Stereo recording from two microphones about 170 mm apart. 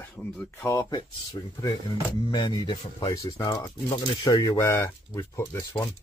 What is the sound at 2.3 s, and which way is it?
Speech, 25° left (ahead or behind).